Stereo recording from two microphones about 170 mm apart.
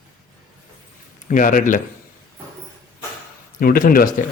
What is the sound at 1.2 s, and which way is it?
Speech, 50° left (ahead or behind).